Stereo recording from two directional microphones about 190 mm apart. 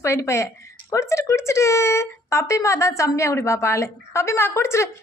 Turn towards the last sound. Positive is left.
turn(degrees=15)  # may be behind; listen again after turning